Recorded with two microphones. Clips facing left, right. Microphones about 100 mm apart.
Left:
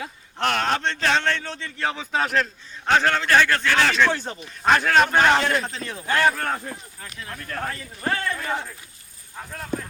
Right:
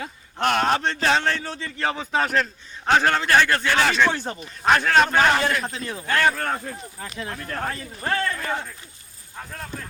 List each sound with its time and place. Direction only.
0.0 s speech: 5° right (ahead or behind)
6.1 s speech: 10° left (ahead or behind)
7.2 s a man's voice: 25° right (ahead or behind)
8.0 s speech: 10° left (ahead or behind)